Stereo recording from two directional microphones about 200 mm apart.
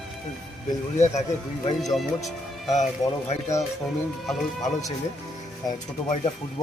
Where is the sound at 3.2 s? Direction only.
35° left (ahead or behind).